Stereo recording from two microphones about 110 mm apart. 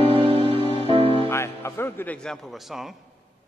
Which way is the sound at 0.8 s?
60° right (ahead or behind).